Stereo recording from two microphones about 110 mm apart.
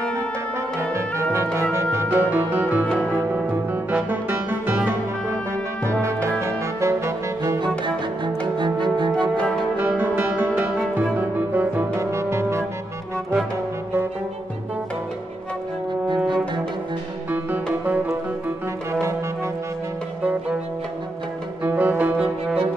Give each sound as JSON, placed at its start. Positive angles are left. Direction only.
{"t": 1.3, "sound": "music", "side_deg": -25}
{"t": 6.4, "sound": "music", "side_deg": -25}
{"t": 8.5, "sound": "music", "side_deg": -45}
{"t": 9.8, "sound": "music", "side_deg": -20}
{"t": 17.8, "sound": "music", "side_deg": -15}
{"t": 21.6, "sound": "cello", "side_deg": -15}